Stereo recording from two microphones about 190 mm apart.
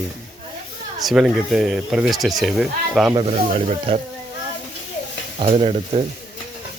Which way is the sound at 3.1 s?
30° right (ahead or behind).